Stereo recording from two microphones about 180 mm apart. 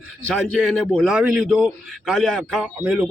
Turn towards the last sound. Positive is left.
turn(degrees=-5)  # may be behind; listen again after turning